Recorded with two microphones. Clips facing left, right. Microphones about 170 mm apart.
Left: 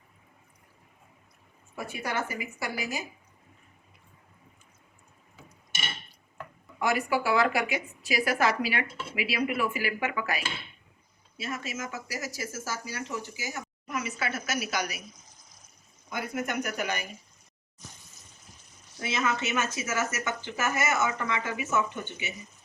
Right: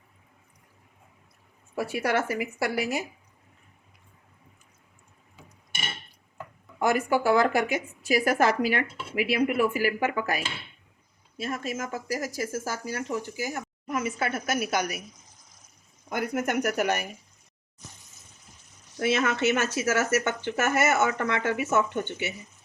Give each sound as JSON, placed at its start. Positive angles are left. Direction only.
{"t": 1.7, "sound": "speech", "side_deg": -80}
{"t": 6.7, "sound": "speech", "side_deg": -45}
{"t": 16.0, "sound": "speech", "side_deg": -60}
{"t": 18.9, "sound": "speech", "side_deg": -65}